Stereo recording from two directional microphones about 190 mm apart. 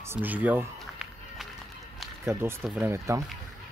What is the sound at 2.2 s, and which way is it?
Speech, 15° right (ahead or behind).